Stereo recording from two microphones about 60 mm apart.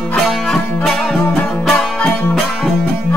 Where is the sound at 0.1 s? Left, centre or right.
Centre.